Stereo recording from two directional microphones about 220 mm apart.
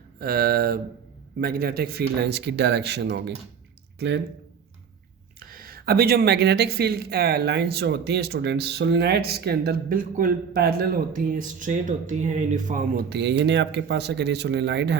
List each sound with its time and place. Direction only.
0.2 s speech: 45° right (ahead or behind)
5.4 s speech: 40° right (ahead or behind)